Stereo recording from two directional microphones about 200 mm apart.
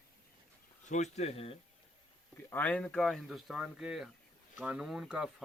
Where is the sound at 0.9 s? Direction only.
35° left (ahead or behind).